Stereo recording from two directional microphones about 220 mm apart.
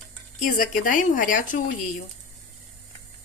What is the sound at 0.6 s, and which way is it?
Speech, 35° left (ahead or behind).